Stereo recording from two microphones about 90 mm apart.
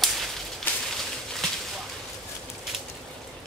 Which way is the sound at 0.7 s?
20° left (ahead or behind).